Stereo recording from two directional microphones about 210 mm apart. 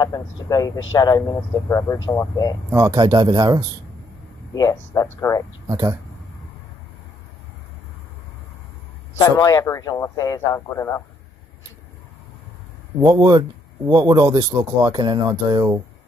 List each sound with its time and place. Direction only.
0.0 s speech: 15° left (ahead or behind)
2.7 s speech: 15° right (ahead or behind)
4.6 s speech: 15° left (ahead or behind)
5.7 s speech: 15° right (ahead or behind)
9.2 s speech: 15° left (ahead or behind)
13.1 s speech: 20° right (ahead or behind)